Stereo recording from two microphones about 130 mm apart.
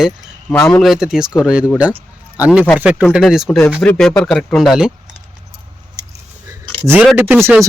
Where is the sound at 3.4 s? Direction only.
5° left (ahead or behind).